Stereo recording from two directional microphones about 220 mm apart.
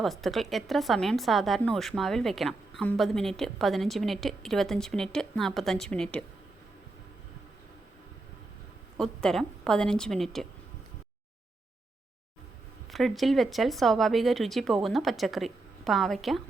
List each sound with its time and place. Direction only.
0.0 s speech: centre (ahead or behind)
9.0 s speech: centre (ahead or behind)
12.9 s speech: centre (ahead or behind)